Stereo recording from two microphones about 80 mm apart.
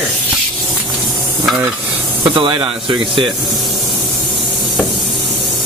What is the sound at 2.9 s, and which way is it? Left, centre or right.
Speech, right.